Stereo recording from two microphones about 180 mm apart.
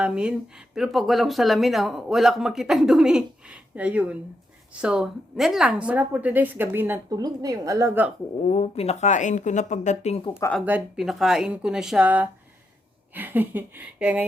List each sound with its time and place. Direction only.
0.0 s a woman's voice: 5° right (ahead or behind)
8.4 s speech: 40° left (ahead or behind)
10.3 s speech: 15° left (ahead or behind)
10.7 s a woman's voice: 5° right (ahead or behind)